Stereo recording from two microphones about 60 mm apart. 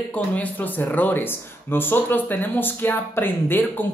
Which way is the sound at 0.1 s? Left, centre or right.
Left.